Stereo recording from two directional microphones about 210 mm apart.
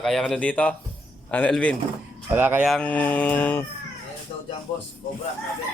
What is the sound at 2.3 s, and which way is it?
Speech, 10° right (ahead or behind).